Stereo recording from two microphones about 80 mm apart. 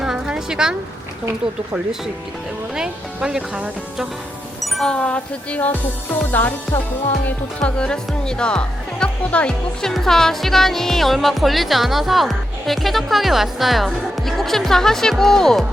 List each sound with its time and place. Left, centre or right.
0.0 s a sound: centre
2.7 s speech: centre
4.6 s music: centre; by 6.5 s left
7.3 s speech: centre